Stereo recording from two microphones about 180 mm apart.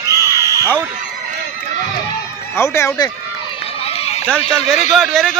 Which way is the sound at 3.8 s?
35° left (ahead or behind).